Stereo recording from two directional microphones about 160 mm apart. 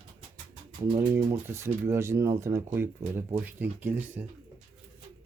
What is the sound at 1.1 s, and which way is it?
Speech, 15° right (ahead or behind).